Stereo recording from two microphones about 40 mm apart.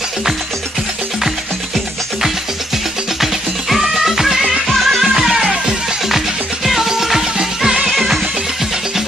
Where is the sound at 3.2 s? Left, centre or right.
Centre.